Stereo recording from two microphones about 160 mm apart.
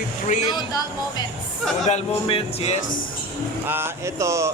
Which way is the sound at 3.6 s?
15° right (ahead or behind).